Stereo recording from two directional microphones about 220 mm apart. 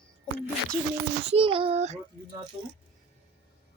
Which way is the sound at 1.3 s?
25° right (ahead or behind).